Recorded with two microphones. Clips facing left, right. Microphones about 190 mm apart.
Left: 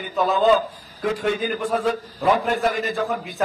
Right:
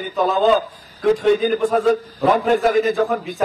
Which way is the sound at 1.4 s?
45° right (ahead or behind).